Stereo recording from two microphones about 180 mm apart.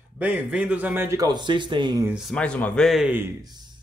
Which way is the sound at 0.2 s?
10° right (ahead or behind).